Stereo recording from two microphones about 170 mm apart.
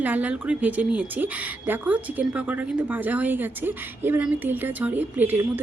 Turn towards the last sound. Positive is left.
turn(degrees=-10)  # may be behind; listen again after turning